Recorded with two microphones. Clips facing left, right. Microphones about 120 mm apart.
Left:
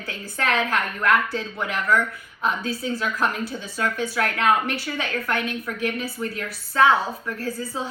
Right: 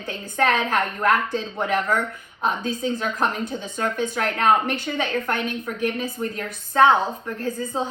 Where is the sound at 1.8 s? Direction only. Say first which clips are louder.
Left 2 dB; 20° right (ahead or behind).